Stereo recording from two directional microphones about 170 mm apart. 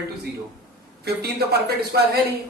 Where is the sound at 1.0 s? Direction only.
70° right (ahead or behind).